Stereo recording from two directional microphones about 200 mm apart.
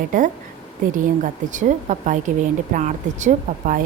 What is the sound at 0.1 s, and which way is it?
Speech, 40° right (ahead or behind).